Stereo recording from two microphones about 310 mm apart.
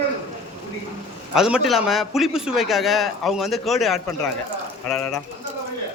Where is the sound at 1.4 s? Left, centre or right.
Centre.